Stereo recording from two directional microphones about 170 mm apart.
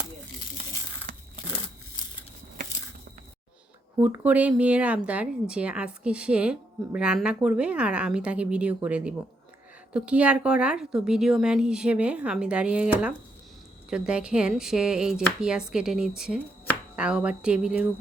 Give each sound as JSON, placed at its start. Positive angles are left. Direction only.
{"t": 1.1, "sound": "tearing", "side_deg": -50}
{"t": 4.0, "sound": "a woman's voice", "side_deg": -10}